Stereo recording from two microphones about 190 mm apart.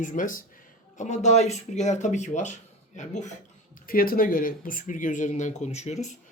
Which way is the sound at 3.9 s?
50° left (ahead or behind).